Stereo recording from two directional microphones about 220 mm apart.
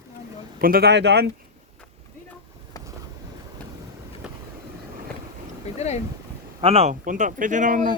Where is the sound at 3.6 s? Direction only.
5° left (ahead or behind).